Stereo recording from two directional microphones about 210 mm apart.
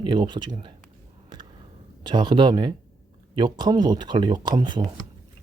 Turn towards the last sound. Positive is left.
turn(degrees=-20)  # may be behind; listen again after turning